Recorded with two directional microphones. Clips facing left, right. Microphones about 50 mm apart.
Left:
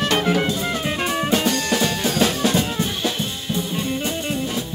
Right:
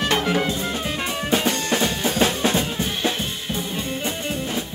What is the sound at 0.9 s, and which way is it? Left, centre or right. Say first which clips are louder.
Music: left 3 dB; left.